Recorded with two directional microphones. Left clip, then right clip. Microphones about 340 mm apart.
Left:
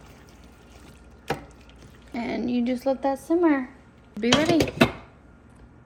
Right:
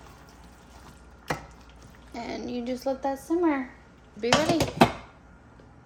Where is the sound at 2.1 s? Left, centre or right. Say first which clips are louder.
Left 6 dB; left.